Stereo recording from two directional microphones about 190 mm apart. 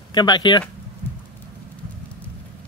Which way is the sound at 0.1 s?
20° left (ahead or behind).